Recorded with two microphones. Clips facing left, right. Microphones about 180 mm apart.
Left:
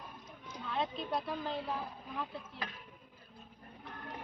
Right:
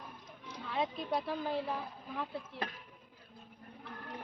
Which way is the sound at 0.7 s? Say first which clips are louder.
Right 1 dB; 5° right (ahead or behind).